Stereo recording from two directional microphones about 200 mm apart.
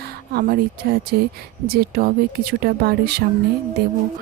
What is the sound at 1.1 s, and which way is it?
Speech, 50° right (ahead or behind).